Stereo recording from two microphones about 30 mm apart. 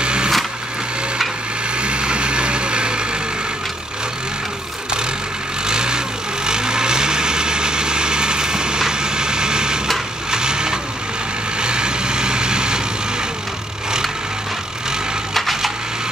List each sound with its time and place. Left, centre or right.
0.0 s a sound: right
1.8 s vehicle: right
5.7 s vehicle: right
15.3 s splinter: centre